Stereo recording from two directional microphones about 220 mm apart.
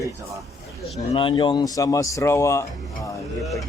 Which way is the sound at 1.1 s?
20° left (ahead or behind).